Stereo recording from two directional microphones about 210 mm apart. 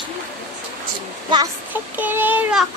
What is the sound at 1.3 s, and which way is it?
A child's voice, 15° right (ahead or behind).